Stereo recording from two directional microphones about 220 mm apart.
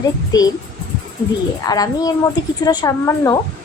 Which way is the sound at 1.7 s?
15° left (ahead or behind).